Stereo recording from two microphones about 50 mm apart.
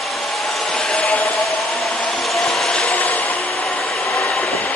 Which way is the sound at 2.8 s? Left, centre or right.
Left.